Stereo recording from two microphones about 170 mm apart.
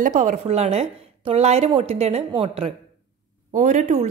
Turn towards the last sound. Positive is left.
turn(degrees=-45)  # may be behind; listen again after turning